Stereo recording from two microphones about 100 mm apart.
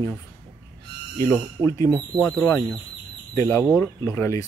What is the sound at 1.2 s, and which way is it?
Speech, 30° left (ahead or behind).